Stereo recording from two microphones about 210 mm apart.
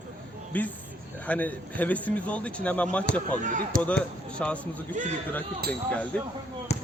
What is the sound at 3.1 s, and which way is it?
Speech, 50° left (ahead or behind).